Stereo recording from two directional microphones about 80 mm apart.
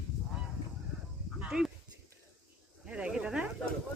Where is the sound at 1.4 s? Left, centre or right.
Centre.